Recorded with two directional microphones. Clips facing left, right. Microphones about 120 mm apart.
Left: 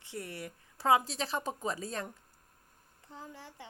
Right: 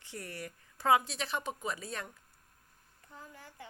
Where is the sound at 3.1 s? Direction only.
25° left (ahead or behind).